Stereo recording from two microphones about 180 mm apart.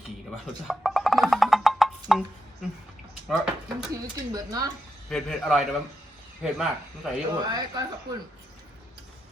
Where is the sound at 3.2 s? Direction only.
5° right (ahead or behind).